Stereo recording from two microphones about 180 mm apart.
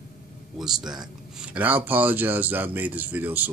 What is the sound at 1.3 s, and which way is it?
Speech, 5° right (ahead or behind).